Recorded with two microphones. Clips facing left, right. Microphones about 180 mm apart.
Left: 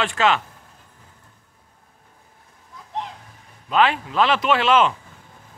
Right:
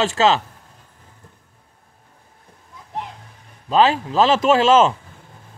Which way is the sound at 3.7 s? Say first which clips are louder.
Right 3 dB; 35° right (ahead or behind).